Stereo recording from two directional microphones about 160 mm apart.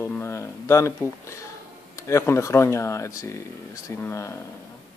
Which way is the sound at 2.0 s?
20° left (ahead or behind).